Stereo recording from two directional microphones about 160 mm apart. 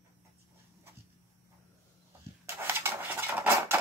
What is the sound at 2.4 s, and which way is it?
Dishes, 15° right (ahead or behind).